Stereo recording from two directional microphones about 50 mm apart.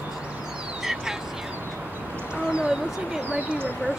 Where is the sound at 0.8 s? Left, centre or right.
Centre.